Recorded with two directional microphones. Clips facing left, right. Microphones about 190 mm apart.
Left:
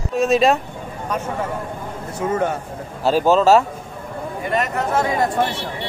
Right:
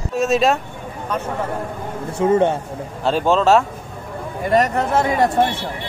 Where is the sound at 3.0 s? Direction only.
5° left (ahead or behind).